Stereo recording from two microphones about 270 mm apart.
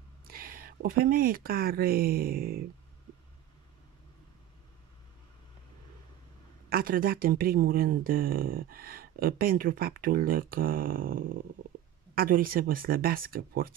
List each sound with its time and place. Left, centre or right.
0.3 s speech: right
6.7 s speech: right